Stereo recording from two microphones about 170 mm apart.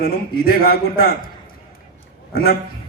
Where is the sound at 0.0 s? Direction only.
65° left (ahead or behind).